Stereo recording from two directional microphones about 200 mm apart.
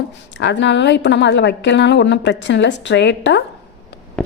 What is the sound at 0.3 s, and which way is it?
A woman's voice, 65° left (ahead or behind).